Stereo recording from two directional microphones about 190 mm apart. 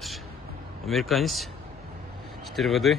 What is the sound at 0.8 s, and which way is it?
Speech, centre (ahead or behind).